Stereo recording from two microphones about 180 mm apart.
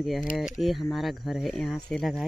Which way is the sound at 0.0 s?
Centre (ahead or behind).